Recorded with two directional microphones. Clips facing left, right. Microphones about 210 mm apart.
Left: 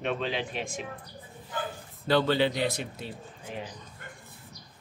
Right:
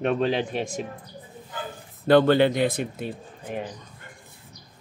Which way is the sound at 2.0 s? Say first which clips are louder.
Right 7 dB; 55° right (ahead or behind).